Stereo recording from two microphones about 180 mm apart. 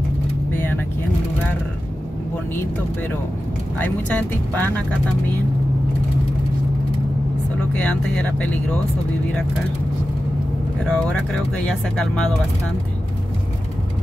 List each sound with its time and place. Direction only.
0.5 s vehicle: 10° left (ahead or behind)
3.7 s speech: 10° left (ahead or behind)
7.7 s speech: 5° left (ahead or behind)
10.9 s speech: 5° left (ahead or behind)